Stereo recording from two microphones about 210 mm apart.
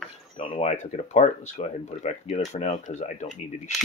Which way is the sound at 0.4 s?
30° left (ahead or behind).